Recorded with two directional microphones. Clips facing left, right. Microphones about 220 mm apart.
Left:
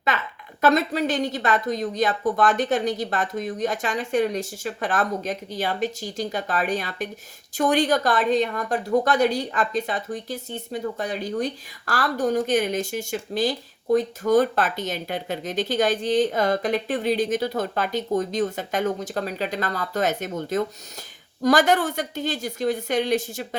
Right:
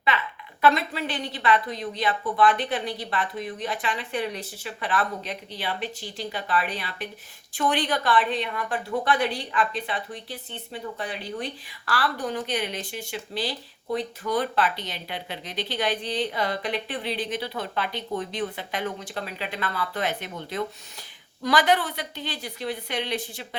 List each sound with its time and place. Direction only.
0.6 s a woman's voice: 45° left (ahead or behind)